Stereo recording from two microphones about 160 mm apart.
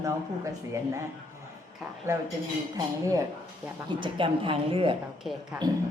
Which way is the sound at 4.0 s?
30° right (ahead or behind).